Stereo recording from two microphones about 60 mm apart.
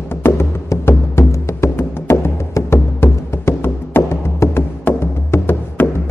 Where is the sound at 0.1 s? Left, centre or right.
Left.